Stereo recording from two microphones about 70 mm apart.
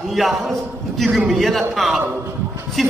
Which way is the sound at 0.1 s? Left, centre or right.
Centre.